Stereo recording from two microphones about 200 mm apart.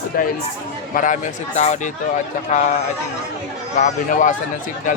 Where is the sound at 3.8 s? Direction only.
40° left (ahead or behind).